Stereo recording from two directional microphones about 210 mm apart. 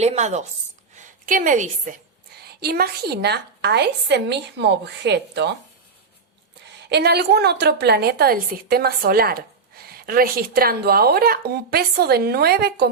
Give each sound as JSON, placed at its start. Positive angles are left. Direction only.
{"t": 0.0, "sound": "a woman's voice", "side_deg": -30}
{"t": 2.6, "sound": "a woman's voice", "side_deg": -45}
{"t": 6.9, "sound": "a woman's voice", "side_deg": -50}